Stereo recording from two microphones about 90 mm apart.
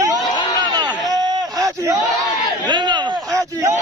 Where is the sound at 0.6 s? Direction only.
50° right (ahead or behind).